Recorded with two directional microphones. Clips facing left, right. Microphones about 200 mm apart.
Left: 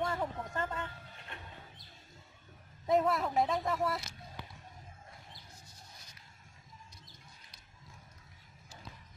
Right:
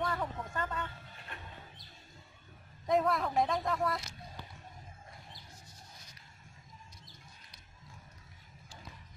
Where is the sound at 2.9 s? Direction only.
Centre (ahead or behind).